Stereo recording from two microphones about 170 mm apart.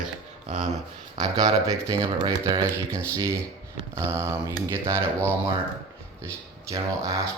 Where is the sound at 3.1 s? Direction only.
15° right (ahead or behind).